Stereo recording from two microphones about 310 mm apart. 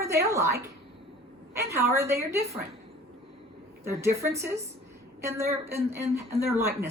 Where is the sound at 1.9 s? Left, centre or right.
Centre.